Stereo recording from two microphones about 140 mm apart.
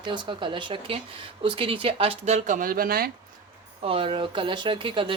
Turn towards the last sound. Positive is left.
turn(degrees=-35)  # may be behind; listen again after turning